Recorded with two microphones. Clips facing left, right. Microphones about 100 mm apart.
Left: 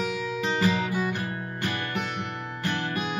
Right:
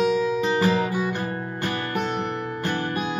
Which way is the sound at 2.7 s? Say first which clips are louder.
Right 2 dB; 30° right (ahead or behind).